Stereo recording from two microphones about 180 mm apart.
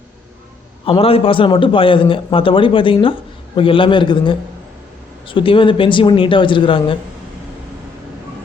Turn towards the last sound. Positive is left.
turn(degrees=30)  # may be behind; listen again after turning